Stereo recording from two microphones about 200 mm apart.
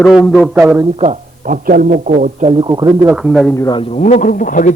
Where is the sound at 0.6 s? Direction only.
15° right (ahead or behind).